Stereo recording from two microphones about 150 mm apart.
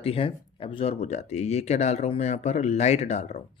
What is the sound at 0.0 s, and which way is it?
Speech, 40° left (ahead or behind).